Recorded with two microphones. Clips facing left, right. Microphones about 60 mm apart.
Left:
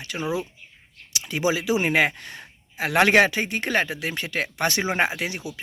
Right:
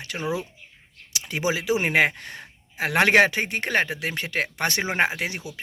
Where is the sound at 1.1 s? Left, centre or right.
Right.